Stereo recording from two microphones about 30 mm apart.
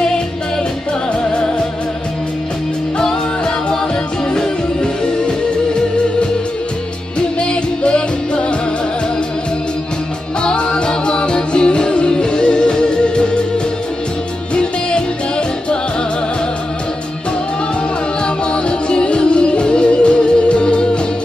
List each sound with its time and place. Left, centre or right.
3.0 s music: left
7.3 s music: left
10.4 s music: left
14.5 s music: left
18.2 s music: left